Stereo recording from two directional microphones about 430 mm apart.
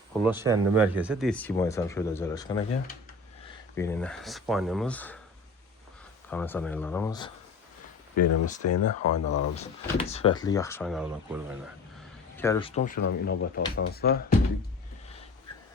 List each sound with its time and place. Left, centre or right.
0.2 s speech: centre
3.8 s speech: centre
6.3 s speech: centre
8.1 s speech: left
9.6 s speech: centre
12.4 s speech: centre